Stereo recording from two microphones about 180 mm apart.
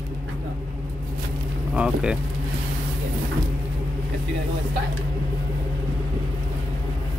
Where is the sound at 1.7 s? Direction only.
5° right (ahead or behind).